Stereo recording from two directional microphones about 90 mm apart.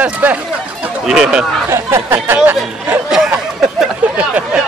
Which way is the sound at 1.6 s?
30° right (ahead or behind).